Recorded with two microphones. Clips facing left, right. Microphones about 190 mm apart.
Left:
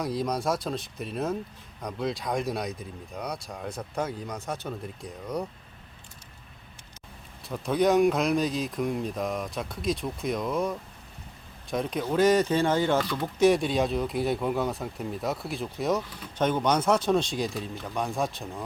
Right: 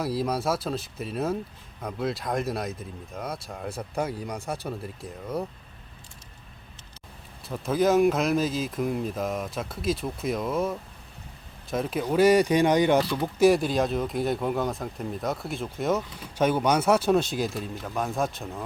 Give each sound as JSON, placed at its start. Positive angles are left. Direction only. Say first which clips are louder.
{"t": 0.0, "sound": "speech", "louder": "right 1 dB", "side_deg": -5}
{"t": 7.4, "sound": "speech", "louder": "right 1 dB", "side_deg": 0}